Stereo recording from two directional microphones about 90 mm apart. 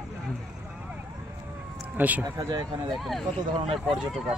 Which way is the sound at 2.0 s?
20° right (ahead or behind).